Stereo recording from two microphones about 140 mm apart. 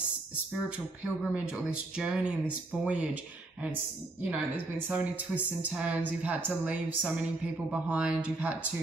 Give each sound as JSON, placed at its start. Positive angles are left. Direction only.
{"t": 0.7, "sound": "a woman's voice", "side_deg": -10}
{"t": 4.2, "sound": "a woman's voice", "side_deg": -10}